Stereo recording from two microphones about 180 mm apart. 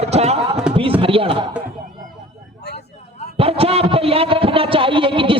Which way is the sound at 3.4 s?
35° right (ahead or behind).